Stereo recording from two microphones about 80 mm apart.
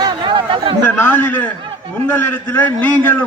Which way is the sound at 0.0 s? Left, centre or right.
Right.